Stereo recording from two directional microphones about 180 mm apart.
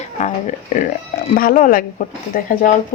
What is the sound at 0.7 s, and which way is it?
Speech, 40° left (ahead or behind).